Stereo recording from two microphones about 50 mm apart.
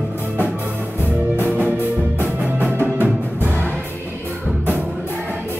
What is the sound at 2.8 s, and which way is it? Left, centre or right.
Music, right.